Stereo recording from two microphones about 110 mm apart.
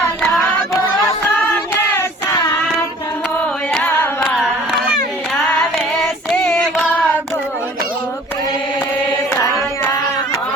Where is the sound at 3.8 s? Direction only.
20° left (ahead or behind).